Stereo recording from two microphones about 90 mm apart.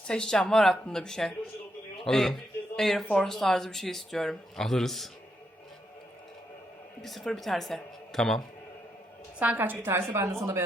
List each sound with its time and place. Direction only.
0.1 s a man's voice: 5° left (ahead or behind)
7.0 s speech: centre (ahead or behind)
9.4 s a woman's voice: 20° right (ahead or behind)